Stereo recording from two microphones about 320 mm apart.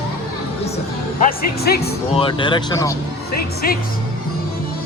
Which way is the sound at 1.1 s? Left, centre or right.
Left.